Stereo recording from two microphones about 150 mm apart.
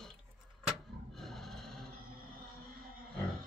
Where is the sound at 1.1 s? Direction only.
Centre (ahead or behind).